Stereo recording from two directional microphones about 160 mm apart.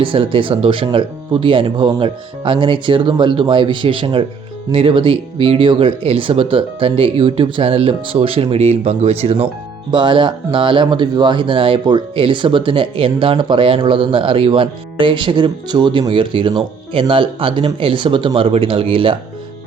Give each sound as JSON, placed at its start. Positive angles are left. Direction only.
{"t": 0.0, "sound": "speech", "side_deg": -35}